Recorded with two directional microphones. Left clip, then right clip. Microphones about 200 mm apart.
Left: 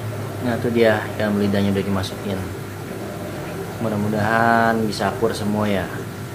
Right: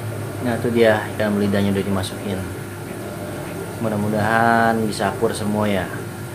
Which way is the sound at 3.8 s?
5° right (ahead or behind).